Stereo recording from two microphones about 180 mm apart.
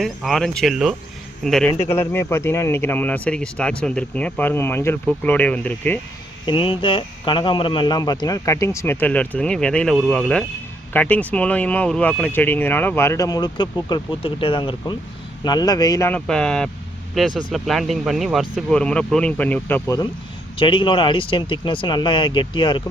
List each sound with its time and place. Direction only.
0.0 s speech: centre (ahead or behind)
1.9 s speech: 15° left (ahead or behind)
6.4 s speech: 30° left (ahead or behind); by 20.0 s 10° left (ahead or behind)
20.6 s speech: 25° left (ahead or behind)